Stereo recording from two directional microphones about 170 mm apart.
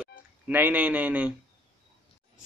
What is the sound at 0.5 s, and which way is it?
Speech, 10° right (ahead or behind).